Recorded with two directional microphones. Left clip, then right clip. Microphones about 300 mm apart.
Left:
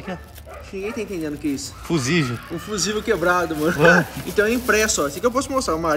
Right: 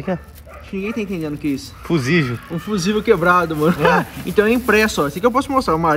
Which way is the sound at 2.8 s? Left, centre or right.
Centre.